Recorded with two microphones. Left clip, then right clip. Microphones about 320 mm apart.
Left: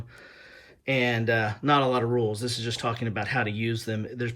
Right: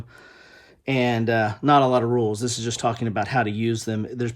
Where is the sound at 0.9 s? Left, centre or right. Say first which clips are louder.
Right 2 dB; centre.